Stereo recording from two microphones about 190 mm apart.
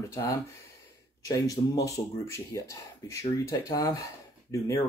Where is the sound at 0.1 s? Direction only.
15° left (ahead or behind).